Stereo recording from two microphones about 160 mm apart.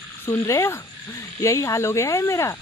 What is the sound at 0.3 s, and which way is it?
A woman's voice, 15° left (ahead or behind).